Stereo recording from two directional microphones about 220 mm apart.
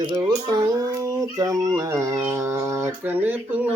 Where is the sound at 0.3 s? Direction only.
20° right (ahead or behind).